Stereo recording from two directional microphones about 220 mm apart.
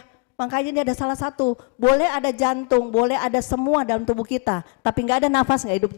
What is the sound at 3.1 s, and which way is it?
A woman's voice, 20° left (ahead or behind).